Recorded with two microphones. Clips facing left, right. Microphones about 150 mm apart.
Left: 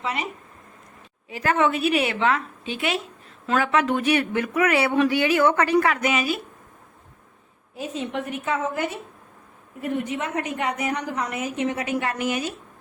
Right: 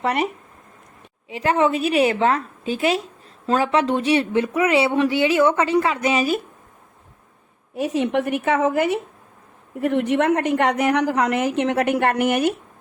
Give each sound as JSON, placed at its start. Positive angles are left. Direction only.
{"t": 0.0, "sound": "speech", "side_deg": -60}
{"t": 1.3, "sound": "a woman's voice", "side_deg": -30}
{"t": 7.8, "sound": "a woman's voice", "side_deg": -75}